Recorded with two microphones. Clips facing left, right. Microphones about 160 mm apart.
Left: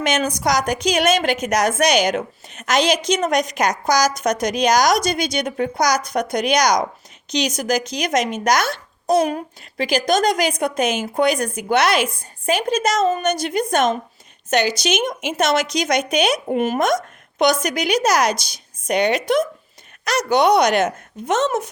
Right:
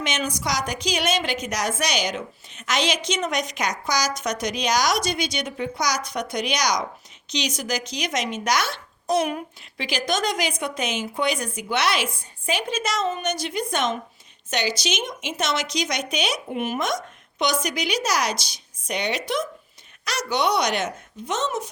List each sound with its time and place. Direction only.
0.0 s a woman's voice: 45° left (ahead or behind)